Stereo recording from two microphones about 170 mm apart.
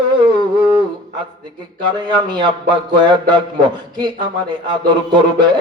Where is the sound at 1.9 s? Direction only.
25° right (ahead or behind).